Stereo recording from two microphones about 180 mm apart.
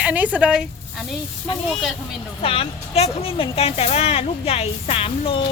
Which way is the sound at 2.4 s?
30° left (ahead or behind).